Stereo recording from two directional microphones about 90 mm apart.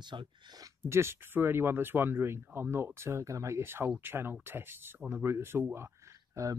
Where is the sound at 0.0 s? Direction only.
55° right (ahead or behind).